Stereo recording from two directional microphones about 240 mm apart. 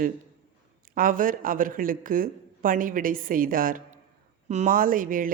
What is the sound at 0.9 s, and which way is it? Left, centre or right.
Speech, right.